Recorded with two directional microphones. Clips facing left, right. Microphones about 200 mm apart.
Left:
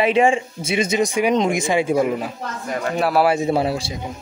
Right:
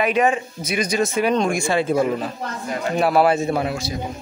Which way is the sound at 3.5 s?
30° left (ahead or behind).